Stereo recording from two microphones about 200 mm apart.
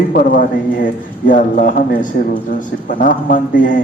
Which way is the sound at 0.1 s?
45° left (ahead or behind).